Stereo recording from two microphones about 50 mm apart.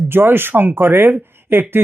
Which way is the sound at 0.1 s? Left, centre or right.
Right.